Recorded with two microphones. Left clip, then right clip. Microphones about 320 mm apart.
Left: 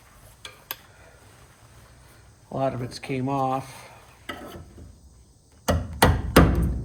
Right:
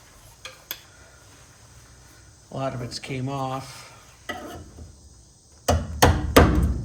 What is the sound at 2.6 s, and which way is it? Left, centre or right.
Speech, centre.